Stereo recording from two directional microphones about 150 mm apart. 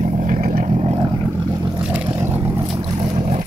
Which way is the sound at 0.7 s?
40° right (ahead or behind).